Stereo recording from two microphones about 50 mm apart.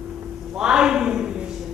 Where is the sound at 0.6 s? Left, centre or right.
Centre.